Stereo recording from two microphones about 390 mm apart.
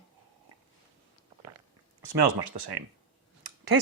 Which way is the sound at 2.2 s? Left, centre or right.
Right.